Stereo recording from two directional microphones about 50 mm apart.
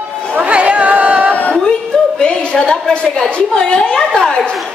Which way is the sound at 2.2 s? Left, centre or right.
Centre.